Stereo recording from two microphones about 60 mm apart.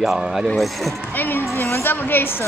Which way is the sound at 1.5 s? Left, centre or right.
Left.